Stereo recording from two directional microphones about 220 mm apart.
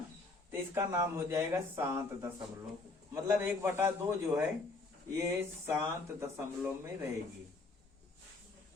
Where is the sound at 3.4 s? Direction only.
10° right (ahead or behind).